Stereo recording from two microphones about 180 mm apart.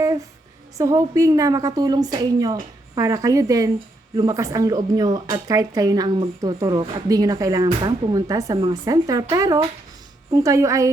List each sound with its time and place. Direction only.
0.8 s a woman's voice: 20° right (ahead or behind)